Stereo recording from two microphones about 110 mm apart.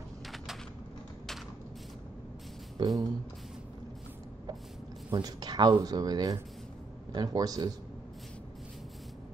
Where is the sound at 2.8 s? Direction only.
45° right (ahead or behind).